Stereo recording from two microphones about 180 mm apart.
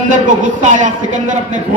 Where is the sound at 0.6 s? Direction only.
45° right (ahead or behind).